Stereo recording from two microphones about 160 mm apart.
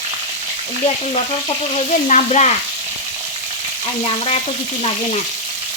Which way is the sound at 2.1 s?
45° left (ahead or behind).